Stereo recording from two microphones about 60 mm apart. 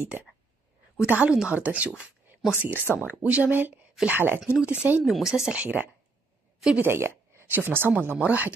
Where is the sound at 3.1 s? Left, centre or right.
Right.